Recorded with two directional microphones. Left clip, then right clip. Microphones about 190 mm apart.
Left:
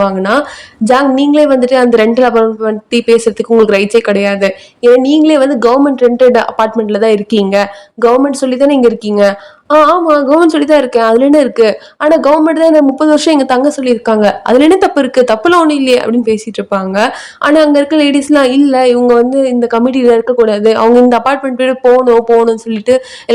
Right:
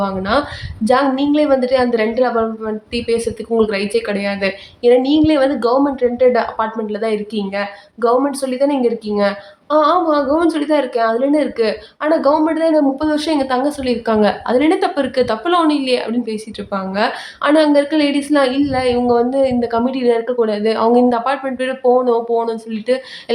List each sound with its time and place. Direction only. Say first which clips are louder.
0.0 s a woman's voice: left 7 dB; 40° left (ahead or behind)